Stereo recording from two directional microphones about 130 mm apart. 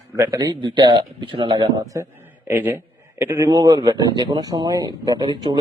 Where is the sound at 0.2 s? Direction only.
25° right (ahead or behind).